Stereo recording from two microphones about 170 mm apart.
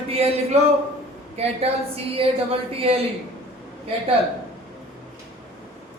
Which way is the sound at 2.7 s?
35° right (ahead or behind).